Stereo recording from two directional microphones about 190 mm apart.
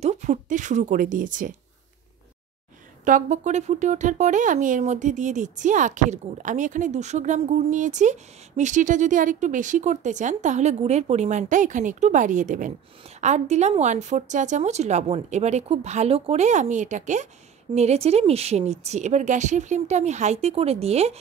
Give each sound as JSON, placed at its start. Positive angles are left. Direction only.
{"t": 0.0, "sound": "speech", "side_deg": -35}
{"t": 3.1, "sound": "speech", "side_deg": -40}